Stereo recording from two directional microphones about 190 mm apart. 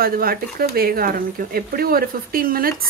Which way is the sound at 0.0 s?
50° right (ahead or behind).